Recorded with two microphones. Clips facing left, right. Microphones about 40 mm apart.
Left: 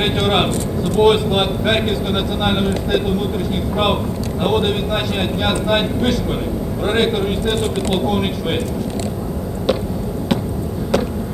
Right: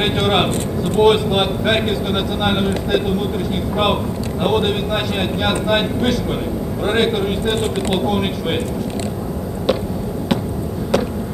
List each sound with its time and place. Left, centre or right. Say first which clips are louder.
0.0 s speech: even; centre
7.4 s speech: even; right
7.9 s speech: even; centre
10.9 s a sound: even; centre